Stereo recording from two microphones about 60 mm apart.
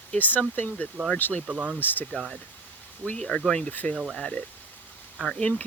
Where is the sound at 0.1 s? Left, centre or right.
Left.